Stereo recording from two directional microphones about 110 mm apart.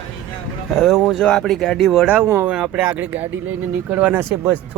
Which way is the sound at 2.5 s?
5° right (ahead or behind).